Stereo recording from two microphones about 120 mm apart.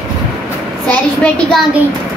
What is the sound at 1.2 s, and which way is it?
Speech, 5° left (ahead or behind).